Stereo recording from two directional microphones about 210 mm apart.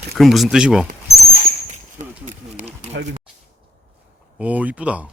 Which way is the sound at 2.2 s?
35° right (ahead or behind).